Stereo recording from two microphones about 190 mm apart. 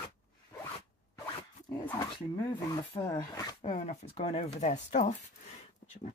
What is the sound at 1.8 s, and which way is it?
Speech, 20° left (ahead or behind).